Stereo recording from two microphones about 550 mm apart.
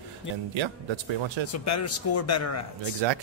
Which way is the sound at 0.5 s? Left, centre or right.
Right.